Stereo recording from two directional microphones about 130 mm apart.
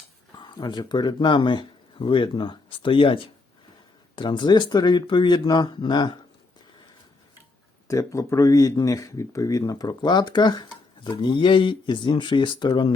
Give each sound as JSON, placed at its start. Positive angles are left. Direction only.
{"t": 0.3, "sound": "speech", "side_deg": 35}
{"t": 7.9, "sound": "speech", "side_deg": 25}